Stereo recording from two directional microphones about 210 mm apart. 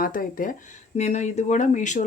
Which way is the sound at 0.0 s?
40° left (ahead or behind).